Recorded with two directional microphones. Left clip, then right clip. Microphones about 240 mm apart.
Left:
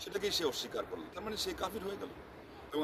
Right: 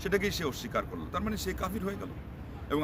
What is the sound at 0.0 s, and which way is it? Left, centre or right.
A man's voice, centre.